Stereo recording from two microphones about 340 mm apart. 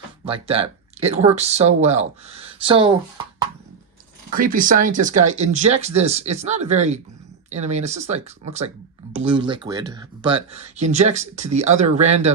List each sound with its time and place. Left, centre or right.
0.3 s speech: centre
4.3 s speech: right
9.2 s speech: centre